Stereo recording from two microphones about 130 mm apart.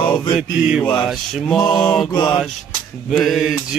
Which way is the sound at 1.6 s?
35° left (ahead or behind).